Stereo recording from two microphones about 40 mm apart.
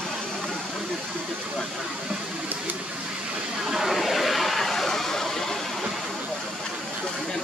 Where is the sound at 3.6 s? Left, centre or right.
Centre.